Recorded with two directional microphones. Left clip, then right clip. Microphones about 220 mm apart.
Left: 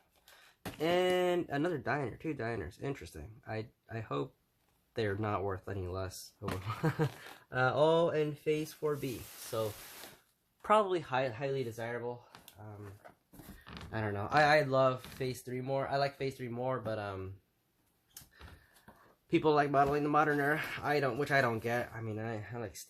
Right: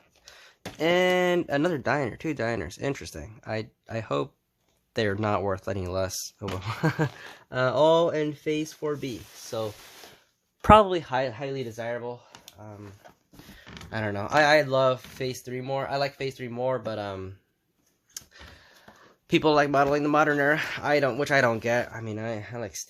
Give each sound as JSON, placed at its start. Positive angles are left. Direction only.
{"t": 0.8, "sound": "speech", "side_deg": -50}
{"t": 10.6, "sound": "speech", "side_deg": -45}
{"t": 11.8, "sound": "speech", "side_deg": -45}
{"t": 13.9, "sound": "speech", "side_deg": -50}
{"t": 19.3, "sound": "speech", "side_deg": -50}